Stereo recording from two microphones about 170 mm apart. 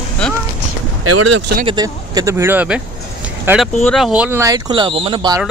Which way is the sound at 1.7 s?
25° right (ahead or behind).